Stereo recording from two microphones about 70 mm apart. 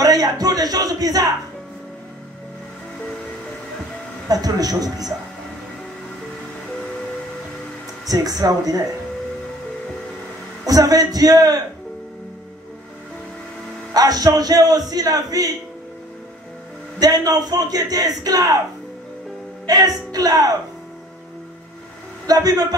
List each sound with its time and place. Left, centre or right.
0.0 s a sound: right
4.3 s a man's voice: right
8.1 s a man's voice: right
10.6 s a man's voice: right
13.9 s a man's voice: right
17.0 s a man's voice: right
19.6 s a man's voice: right
22.2 s a man's voice: right